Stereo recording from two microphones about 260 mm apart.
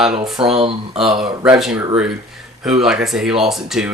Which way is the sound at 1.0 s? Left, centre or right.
Centre.